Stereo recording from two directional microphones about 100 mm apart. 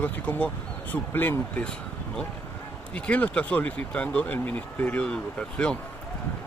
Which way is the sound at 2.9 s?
15° left (ahead or behind).